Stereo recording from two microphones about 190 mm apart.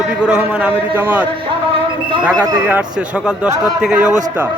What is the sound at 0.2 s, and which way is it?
A man's voice, 5° right (ahead or behind).